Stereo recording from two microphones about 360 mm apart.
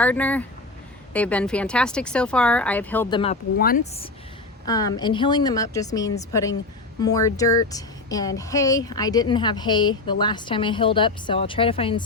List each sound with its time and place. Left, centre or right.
0.0 s a woman's voice: centre